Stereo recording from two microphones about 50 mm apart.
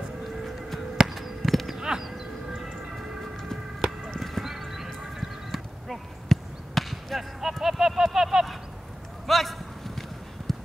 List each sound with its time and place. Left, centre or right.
0.9 s insect: centre
1.8 s a sound: centre
4.2 s horse: centre
9.3 s clip-clop: centre